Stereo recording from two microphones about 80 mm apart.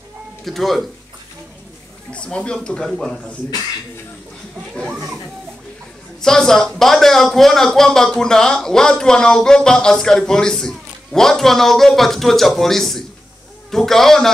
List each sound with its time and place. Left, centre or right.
0.5 s a man's voice: centre
2.1 s speech: centre
4.8 s children playing: centre
6.2 s a man's voice: centre